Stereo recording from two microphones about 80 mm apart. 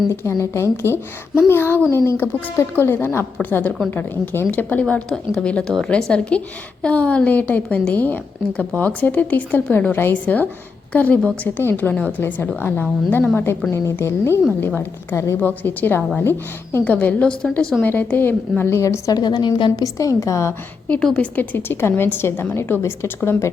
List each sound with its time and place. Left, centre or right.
0.1 s a woman's voice: left
15.4 s a woman's voice: left
17.6 s a woman's voice: centre
17.8 s a woman's voice: left
19.1 s a woman's voice: left
19.7 s a woman's voice: left
21.2 s a woman's voice: left